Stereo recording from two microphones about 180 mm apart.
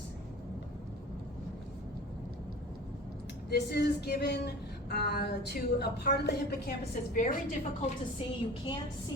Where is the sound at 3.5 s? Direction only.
65° left (ahead or behind).